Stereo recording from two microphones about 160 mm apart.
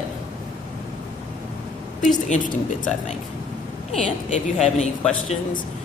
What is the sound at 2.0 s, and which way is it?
Speech, 55° left (ahead or behind).